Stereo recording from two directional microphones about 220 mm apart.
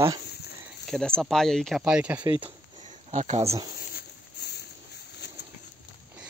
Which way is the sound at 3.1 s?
30° right (ahead or behind).